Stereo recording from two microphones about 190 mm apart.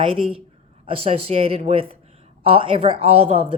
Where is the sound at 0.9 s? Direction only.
30° right (ahead or behind).